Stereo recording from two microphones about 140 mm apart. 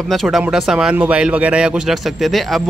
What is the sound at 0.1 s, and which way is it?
Speech, centre (ahead or behind).